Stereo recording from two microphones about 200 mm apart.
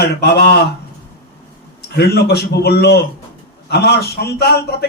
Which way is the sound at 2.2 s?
55° left (ahead or behind).